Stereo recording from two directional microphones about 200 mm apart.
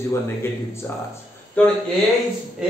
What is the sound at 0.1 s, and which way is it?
Speech, 10° left (ahead or behind).